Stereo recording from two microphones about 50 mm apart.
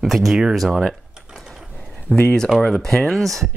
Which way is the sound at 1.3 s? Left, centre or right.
Centre.